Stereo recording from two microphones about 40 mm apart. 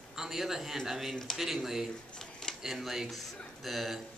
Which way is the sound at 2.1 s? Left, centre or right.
Centre.